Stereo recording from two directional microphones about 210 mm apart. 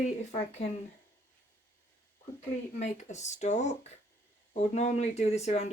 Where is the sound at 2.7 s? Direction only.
35° left (ahead or behind).